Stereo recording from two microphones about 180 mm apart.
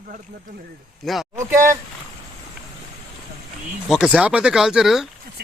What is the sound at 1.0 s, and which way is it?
Speech, centre (ahead or behind).